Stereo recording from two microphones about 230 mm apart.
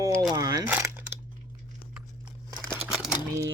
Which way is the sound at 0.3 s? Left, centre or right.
Centre.